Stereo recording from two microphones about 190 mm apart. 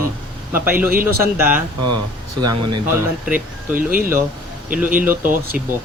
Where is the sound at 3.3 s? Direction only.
45° right (ahead or behind).